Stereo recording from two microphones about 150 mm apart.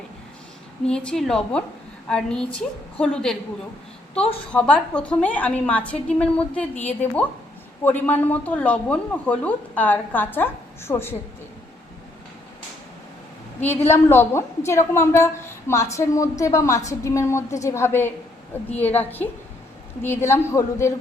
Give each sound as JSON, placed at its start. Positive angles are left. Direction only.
{"t": 0.9, "sound": "a woman's voice", "side_deg": 5}
{"t": 4.5, "sound": "speech", "side_deg": 5}
{"t": 13.6, "sound": "a woman's voice", "side_deg": 15}